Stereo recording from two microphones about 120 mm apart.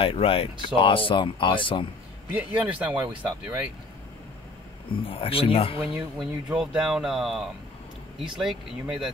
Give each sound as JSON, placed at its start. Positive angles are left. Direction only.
{"t": 0.0, "sound": "speech", "side_deg": 50}
{"t": 2.3, "sound": "a man's voice", "side_deg": -10}
{"t": 5.0, "sound": "speech", "side_deg": 50}
{"t": 5.8, "sound": "speech", "side_deg": -5}